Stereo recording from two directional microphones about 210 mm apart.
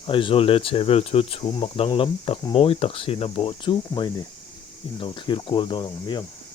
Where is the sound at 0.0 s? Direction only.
25° left (ahead or behind).